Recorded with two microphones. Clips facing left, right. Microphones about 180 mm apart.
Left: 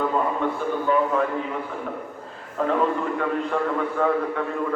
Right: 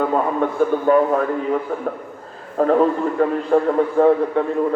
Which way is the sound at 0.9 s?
45° right (ahead or behind).